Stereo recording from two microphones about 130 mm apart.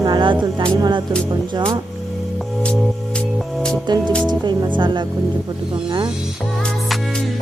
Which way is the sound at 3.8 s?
35° right (ahead or behind).